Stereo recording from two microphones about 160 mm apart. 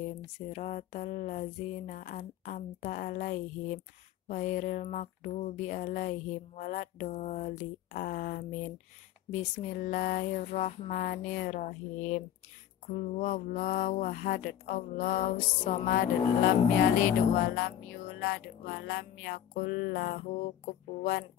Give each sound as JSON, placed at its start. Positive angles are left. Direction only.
{"t": 0.5, "sound": "speech", "side_deg": 50}